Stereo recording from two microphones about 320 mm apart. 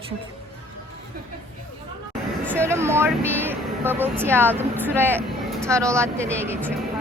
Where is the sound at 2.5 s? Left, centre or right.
Centre.